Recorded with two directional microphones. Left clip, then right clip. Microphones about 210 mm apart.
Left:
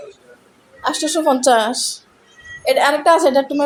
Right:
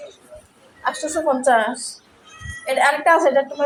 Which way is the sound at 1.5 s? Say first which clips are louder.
Left 3 dB; 50° left (ahead or behind).